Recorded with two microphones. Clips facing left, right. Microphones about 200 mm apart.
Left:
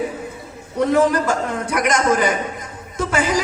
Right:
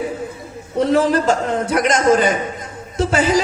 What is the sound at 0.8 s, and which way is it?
Speech, 30° right (ahead or behind).